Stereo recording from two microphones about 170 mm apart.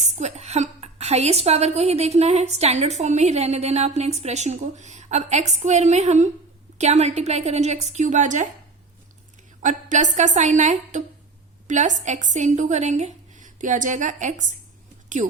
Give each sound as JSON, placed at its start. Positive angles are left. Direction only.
{"t": 0.0, "sound": "a woman's voice", "side_deg": -40}
{"t": 9.6, "sound": "a woman's voice", "side_deg": -45}